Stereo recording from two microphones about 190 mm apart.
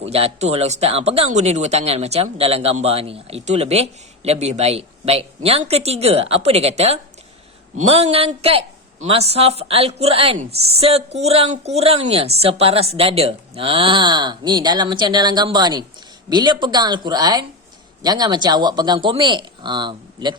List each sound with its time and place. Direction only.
0.1 s speech: 30° right (ahead or behind)